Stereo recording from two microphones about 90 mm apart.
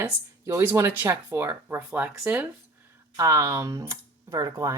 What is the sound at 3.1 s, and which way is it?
Speech, 40° right (ahead or behind).